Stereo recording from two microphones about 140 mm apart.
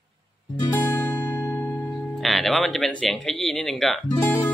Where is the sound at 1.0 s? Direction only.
15° left (ahead or behind).